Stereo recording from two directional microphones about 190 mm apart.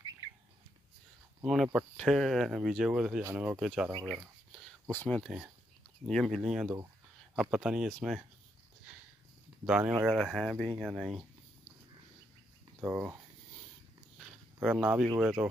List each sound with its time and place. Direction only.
1.4 s speech: centre (ahead or behind)
9.7 s speech: 5° right (ahead or behind)
12.8 s speech: 10° right (ahead or behind)
14.1 s a sound: 5° right (ahead or behind)
15.1 s speech: 5° right (ahead or behind)